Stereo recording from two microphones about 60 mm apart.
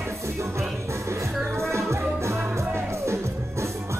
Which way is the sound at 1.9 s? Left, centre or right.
Right.